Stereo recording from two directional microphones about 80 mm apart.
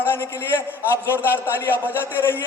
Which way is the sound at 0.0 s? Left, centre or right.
Left.